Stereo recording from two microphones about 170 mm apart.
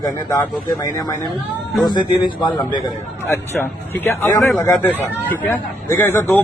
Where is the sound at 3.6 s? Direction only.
5° left (ahead or behind).